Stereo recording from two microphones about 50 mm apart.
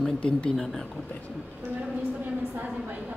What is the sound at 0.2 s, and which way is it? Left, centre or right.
Speech, left.